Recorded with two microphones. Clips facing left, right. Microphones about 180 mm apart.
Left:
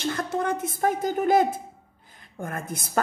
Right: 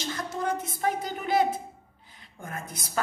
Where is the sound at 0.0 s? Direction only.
55° left (ahead or behind).